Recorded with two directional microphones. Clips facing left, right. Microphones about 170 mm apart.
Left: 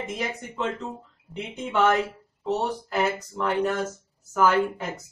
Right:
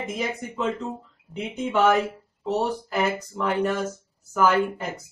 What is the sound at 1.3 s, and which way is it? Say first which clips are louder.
Speech: right 3 dB; 5° right (ahead or behind).